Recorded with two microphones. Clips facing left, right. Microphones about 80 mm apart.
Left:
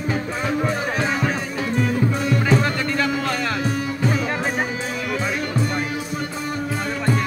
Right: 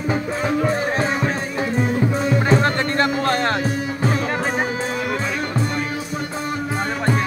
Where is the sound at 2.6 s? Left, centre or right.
Right.